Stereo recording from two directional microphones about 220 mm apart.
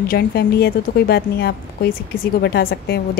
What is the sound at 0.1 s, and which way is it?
Speech, 45° left (ahead or behind).